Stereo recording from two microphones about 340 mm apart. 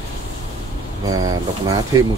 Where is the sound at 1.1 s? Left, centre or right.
Centre.